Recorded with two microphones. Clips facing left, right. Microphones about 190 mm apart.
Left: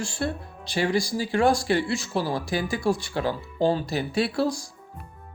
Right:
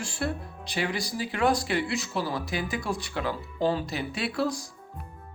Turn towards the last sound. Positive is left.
turn(degrees=30)  # may be behind; listen again after turning